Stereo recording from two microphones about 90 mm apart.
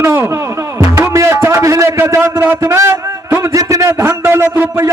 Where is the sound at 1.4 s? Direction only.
30° right (ahead or behind).